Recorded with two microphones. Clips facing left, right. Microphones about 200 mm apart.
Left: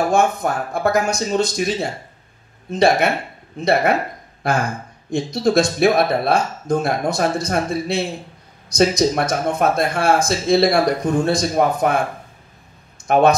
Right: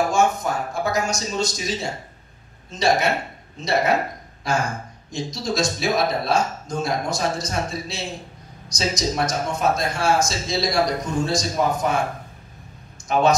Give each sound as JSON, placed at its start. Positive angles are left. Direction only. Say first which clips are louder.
{"t": 0.4, "sound": "speech", "louder": "left 4 dB", "side_deg": 60}
{"t": 13.0, "sound": "speech", "louder": "left 4 dB", "side_deg": 55}